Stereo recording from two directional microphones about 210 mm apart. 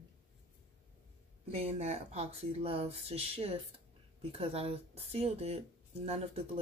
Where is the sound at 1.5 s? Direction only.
30° right (ahead or behind).